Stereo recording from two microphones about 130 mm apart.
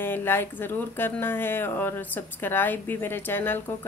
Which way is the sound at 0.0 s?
15° left (ahead or behind).